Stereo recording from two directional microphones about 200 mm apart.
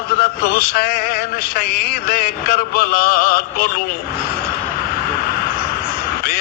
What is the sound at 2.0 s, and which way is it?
A man's voice, 45° left (ahead or behind).